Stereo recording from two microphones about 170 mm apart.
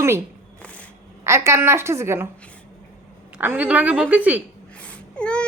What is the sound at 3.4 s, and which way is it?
A woman's voice, 10° right (ahead or behind).